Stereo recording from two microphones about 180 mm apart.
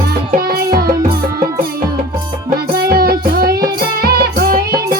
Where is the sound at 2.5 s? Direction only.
60° right (ahead or behind).